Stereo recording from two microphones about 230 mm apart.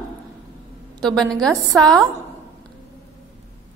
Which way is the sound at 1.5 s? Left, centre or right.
Centre.